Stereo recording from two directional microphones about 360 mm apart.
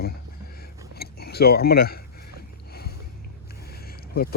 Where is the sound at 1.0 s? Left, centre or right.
Left.